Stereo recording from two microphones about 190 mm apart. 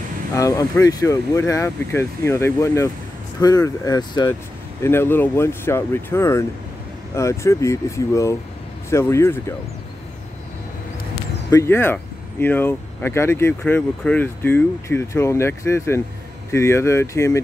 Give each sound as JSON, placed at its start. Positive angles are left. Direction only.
{"t": 0.3, "sound": "speech", "side_deg": 15}
{"t": 11.5, "sound": "speech", "side_deg": 15}